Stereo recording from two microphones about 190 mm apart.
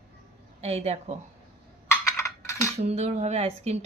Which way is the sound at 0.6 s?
35° right (ahead or behind).